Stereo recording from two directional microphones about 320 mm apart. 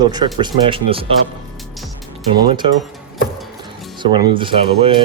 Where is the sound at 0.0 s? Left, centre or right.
Centre.